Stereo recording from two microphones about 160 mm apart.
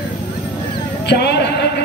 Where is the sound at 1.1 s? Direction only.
90° left.